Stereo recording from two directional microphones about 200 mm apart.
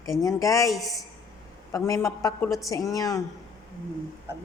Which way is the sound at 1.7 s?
15° left (ahead or behind).